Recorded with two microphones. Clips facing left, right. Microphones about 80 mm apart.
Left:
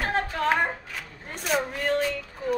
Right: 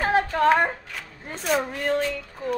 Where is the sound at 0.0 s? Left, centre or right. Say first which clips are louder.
Right 6 dB; centre.